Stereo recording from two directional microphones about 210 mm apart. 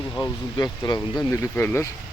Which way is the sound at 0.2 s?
20° left (ahead or behind).